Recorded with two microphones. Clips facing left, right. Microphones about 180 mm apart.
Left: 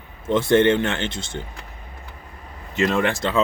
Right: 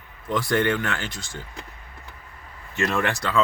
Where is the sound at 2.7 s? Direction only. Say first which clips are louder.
Left 4 dB; 20° left (ahead or behind).